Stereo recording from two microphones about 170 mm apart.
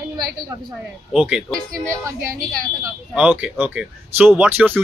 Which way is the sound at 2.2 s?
55° right (ahead or behind).